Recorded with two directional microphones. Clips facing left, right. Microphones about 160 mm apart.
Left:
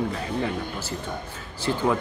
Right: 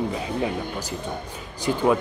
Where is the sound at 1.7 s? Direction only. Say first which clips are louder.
Right 2 dB; 15° right (ahead or behind).